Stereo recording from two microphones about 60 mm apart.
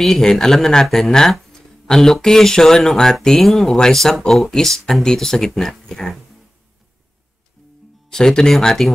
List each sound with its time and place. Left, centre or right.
0.0 s speech: centre
8.1 s speech: centre